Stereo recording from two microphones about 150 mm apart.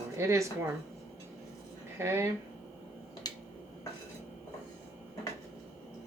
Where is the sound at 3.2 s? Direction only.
25° left (ahead or behind).